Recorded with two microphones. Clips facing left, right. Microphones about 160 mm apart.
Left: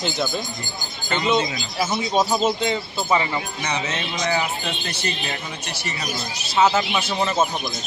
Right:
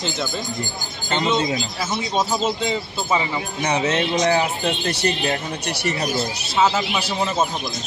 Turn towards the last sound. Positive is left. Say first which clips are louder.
# left 1 dB
turn(degrees=0)  # may be behind; listen again after turning